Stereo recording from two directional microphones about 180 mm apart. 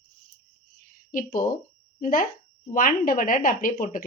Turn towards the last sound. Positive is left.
turn(degrees=50)  # may be behind; listen again after turning